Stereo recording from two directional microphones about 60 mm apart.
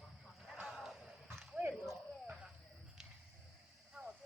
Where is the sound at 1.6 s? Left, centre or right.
Right.